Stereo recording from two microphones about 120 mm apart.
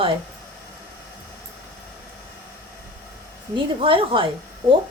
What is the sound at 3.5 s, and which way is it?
Speech, 45° right (ahead or behind).